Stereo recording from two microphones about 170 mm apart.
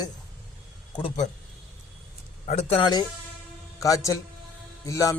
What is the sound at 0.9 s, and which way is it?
Speech, 35° left (ahead or behind).